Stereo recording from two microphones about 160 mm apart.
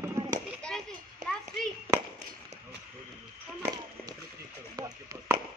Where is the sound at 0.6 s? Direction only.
5° left (ahead or behind).